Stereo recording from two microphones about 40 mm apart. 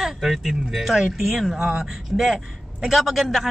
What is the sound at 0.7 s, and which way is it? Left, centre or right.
A man's voice, centre.